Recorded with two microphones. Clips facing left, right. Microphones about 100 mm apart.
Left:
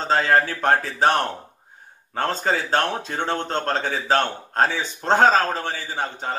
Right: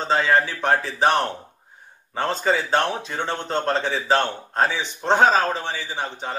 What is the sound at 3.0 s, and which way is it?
Speech, 40° left (ahead or behind).